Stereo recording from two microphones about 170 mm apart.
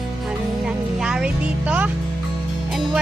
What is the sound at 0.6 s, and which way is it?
Music, 5° right (ahead or behind).